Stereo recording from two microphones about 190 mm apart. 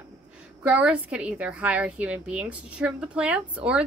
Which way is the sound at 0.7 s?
5° right (ahead or behind).